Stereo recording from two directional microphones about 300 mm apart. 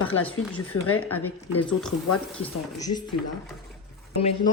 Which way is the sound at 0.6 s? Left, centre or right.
Left.